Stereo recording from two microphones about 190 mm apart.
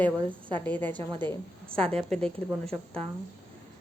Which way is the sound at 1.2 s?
25° right (ahead or behind).